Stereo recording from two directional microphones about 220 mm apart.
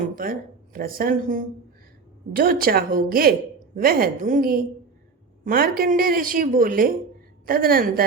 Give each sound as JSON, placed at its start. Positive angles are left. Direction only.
{"t": 0.2, "sound": "speech", "side_deg": -40}